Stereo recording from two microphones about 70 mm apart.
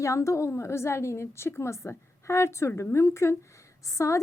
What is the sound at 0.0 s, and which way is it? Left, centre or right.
A woman's voice, left.